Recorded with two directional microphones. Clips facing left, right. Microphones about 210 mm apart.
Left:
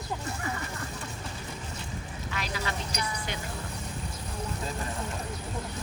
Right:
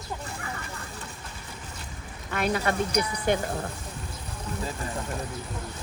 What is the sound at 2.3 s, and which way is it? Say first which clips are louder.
Speech: right 9 dB; 55° right (ahead or behind).